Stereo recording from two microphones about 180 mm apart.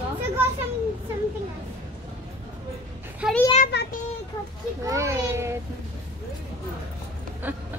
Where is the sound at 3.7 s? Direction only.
70° left (ahead or behind).